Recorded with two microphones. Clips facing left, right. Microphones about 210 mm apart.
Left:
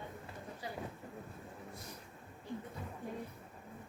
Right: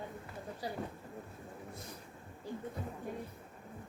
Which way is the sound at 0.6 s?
35° right (ahead or behind).